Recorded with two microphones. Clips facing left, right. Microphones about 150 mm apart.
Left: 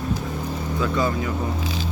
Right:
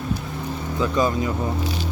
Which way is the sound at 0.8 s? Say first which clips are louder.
Right 2 dB; 20° right (ahead or behind).